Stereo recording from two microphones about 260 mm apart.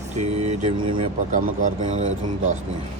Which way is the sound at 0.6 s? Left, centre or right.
Right.